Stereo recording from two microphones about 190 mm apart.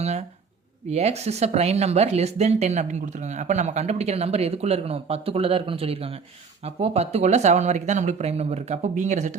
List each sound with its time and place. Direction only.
0.0 s speech: 35° right (ahead or behind)